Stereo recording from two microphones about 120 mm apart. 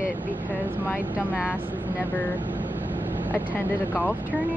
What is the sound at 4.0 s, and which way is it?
Speech, 15° right (ahead or behind).